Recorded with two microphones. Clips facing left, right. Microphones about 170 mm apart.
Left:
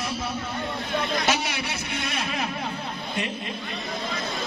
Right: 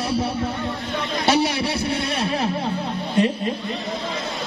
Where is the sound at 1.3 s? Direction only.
35° right (ahead or behind).